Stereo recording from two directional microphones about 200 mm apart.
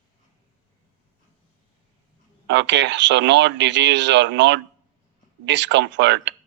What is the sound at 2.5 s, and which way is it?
Speech, 60° right (ahead or behind).